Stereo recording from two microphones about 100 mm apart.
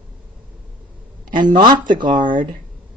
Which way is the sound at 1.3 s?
50° right (ahead or behind).